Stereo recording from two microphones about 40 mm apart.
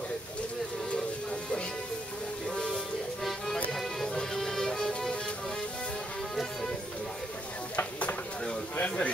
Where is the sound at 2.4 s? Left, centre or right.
Centre.